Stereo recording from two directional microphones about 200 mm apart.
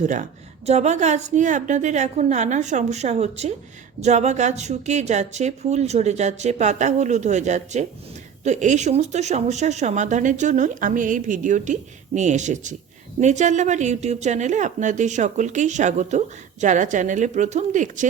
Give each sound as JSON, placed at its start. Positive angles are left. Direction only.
{"t": 0.0, "sound": "a woman's voice", "side_deg": -35}